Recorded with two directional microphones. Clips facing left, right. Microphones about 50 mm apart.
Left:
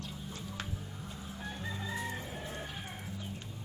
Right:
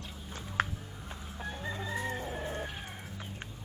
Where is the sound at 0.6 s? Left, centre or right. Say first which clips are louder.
Right 14 dB; right.